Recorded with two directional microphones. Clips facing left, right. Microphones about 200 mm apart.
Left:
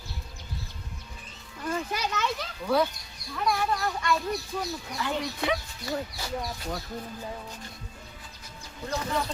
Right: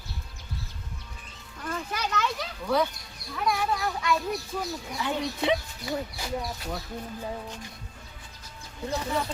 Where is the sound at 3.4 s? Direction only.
Centre (ahead or behind).